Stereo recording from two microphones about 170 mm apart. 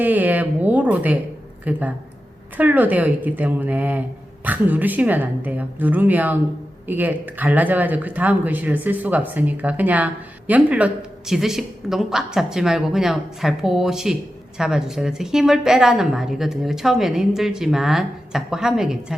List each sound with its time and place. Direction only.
0.0 s a woman's voice: 10° right (ahead or behind)